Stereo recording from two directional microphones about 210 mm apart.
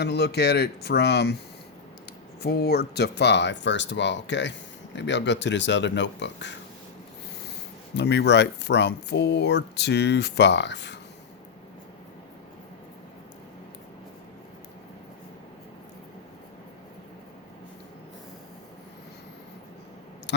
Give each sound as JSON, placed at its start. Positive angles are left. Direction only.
{"t": 0.0, "sound": "speech", "side_deg": 50}
{"t": 2.4, "sound": "speech", "side_deg": 50}
{"t": 7.9, "sound": "speech", "side_deg": 55}